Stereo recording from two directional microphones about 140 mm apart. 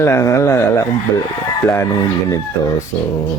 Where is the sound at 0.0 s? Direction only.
20° left (ahead or behind).